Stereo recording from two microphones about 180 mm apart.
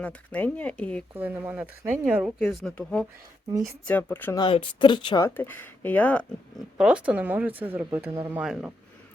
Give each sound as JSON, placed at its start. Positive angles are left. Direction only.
{"t": 0.0, "sound": "speech", "side_deg": 5}
{"t": 1.1, "sound": "speech", "side_deg": -10}
{"t": 3.5, "sound": "speech", "side_deg": -15}
{"t": 3.8, "sound": "speech", "side_deg": 10}
{"t": 4.4, "sound": "speech", "side_deg": 30}
{"t": 6.7, "sound": "speech", "side_deg": -5}